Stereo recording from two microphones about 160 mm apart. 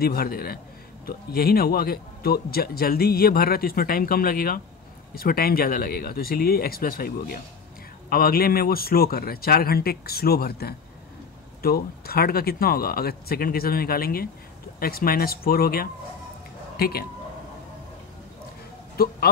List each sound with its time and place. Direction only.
0.0 s a man's voice: 70° left (ahead or behind)
19.0 s a man's voice: 70° left (ahead or behind)